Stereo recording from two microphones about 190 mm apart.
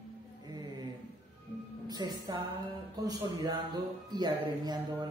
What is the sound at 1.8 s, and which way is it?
A woman's voice, 20° right (ahead or behind).